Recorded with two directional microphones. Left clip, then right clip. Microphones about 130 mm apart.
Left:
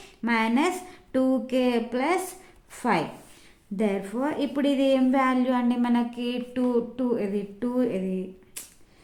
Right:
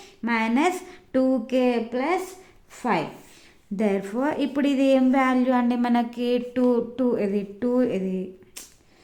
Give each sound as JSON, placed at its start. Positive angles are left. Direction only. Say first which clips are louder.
{"t": 0.0, "sound": "speech", "louder": "even", "side_deg": -10}
{"t": 1.9, "sound": "a woman's voice", "louder": "right 1 dB", "side_deg": -5}
{"t": 3.8, "sound": "a woman's voice", "louder": "right 2 dB", "side_deg": -25}